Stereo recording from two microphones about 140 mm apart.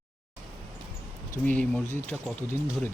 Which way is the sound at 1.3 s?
10° left (ahead or behind).